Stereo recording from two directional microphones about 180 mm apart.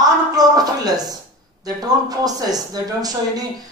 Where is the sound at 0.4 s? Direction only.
20° right (ahead or behind).